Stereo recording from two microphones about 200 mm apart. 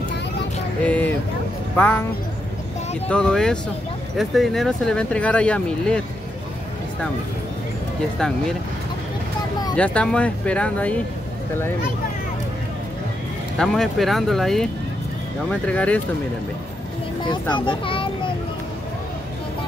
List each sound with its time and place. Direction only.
0.8 s vehicle: 5° left (ahead or behind)
1.8 s speech: 10° left (ahead or behind)
3.1 s speech: 5° left (ahead or behind)
9.8 s speech: 5° left (ahead or behind)
13.6 s speech: centre (ahead or behind)
17.3 s a child's voice: 25° left (ahead or behind)